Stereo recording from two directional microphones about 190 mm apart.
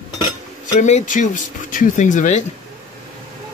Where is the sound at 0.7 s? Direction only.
40° left (ahead or behind).